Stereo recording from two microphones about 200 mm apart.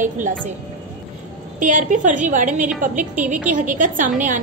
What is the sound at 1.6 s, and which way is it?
A woman's voice, 40° right (ahead or behind).